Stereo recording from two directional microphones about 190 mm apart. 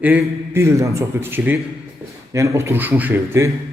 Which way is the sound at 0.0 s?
10° right (ahead or behind).